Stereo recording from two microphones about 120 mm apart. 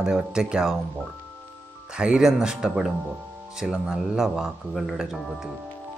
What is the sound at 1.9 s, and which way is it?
Speech, 10° right (ahead or behind).